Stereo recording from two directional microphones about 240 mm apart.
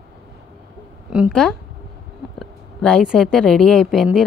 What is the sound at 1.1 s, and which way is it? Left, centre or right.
Speech, centre.